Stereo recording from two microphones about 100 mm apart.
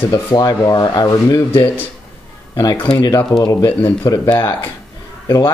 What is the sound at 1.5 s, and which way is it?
Speech, 25° left (ahead or behind).